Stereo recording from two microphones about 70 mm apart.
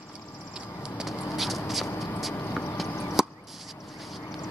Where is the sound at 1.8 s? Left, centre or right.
Left.